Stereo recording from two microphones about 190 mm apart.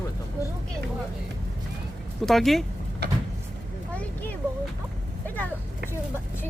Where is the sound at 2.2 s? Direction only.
Centre (ahead or behind).